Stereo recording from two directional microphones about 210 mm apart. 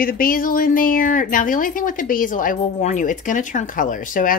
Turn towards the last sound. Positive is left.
turn(degrees=40)  # may be behind; listen again after turning